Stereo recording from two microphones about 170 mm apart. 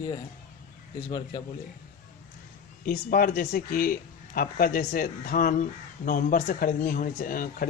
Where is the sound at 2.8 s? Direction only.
60° left (ahead or behind).